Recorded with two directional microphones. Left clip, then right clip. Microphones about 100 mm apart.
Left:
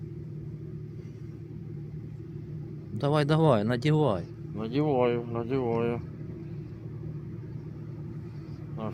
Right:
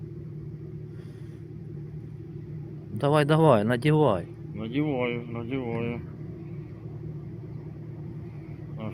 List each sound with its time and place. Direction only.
3.0 s speech: 5° right (ahead or behind)
4.5 s speech: 70° left (ahead or behind)